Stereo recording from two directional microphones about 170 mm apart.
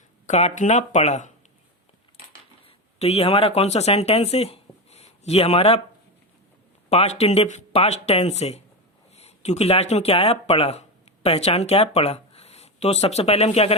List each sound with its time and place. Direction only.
0.3 s speech: 40° left (ahead or behind)
2.6 s speech: 35° left (ahead or behind)
6.9 s speech: 40° left (ahead or behind)